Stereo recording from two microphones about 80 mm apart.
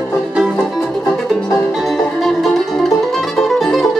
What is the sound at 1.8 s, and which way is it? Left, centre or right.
Music, centre.